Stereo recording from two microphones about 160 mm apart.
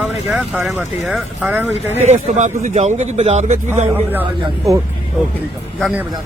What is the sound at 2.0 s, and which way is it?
A man's voice, 45° right (ahead or behind).